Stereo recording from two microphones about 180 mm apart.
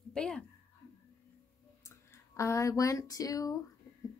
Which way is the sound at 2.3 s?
15° left (ahead or behind).